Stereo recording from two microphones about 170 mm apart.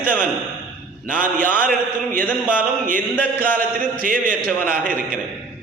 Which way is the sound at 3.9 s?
55° right (ahead or behind).